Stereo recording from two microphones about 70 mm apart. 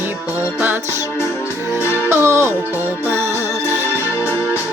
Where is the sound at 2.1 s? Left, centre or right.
Right.